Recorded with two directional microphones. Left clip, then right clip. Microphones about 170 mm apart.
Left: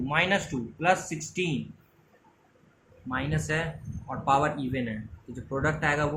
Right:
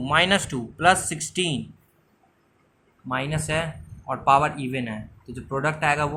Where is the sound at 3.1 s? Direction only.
50° right (ahead or behind).